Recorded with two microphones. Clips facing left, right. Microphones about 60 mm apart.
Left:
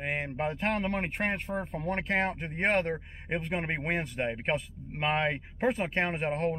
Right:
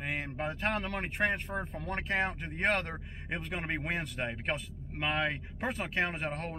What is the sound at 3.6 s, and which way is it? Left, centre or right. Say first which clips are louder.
Speech: left 3 dB; centre.